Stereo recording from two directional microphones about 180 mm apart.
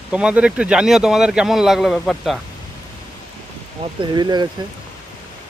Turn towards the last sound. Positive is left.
turn(degrees=-25)  # may be behind; listen again after turning